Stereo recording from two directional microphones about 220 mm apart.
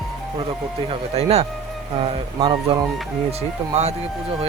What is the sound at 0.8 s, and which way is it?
A man's voice, 30° right (ahead or behind).